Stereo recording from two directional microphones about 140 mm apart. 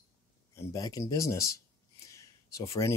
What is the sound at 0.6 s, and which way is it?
Speech, 25° left (ahead or behind).